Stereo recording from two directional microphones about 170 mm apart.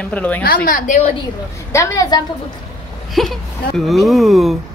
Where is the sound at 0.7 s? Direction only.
50° left (ahead or behind).